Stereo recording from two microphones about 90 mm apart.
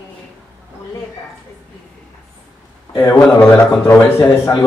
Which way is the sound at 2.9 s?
25° left (ahead or behind).